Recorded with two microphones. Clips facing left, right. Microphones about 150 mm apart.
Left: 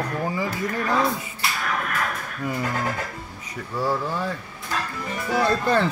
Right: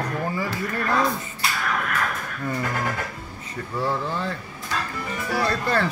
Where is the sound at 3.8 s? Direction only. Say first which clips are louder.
Left 1 dB; 10° left (ahead or behind).